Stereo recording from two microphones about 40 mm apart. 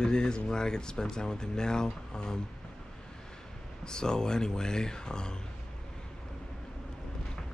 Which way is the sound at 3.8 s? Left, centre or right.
Centre.